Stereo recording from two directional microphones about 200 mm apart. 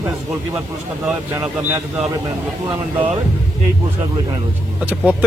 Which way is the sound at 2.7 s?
25° right (ahead or behind).